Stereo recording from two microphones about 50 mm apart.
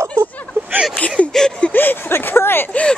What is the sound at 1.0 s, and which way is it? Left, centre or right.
Speech, left.